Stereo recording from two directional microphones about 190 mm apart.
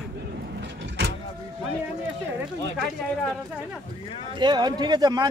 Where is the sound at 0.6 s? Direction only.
65° right (ahead or behind).